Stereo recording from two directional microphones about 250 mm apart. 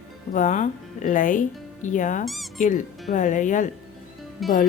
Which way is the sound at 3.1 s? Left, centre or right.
Left.